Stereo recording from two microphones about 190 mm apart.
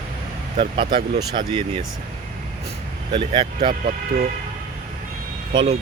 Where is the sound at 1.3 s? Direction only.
25° right (ahead or behind).